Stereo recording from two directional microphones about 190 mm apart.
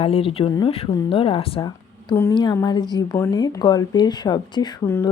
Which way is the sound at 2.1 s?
15° left (ahead or behind).